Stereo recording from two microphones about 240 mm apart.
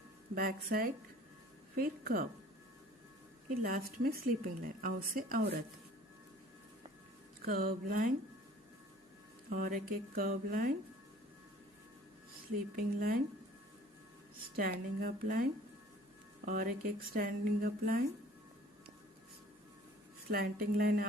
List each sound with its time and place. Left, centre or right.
0.3 s speech: right
3.6 s speech: right
7.4 s speech: right
9.5 s speech: right
12.7 s speech: right
14.5 s speech: right
16.5 s speech: right
20.3 s speech: right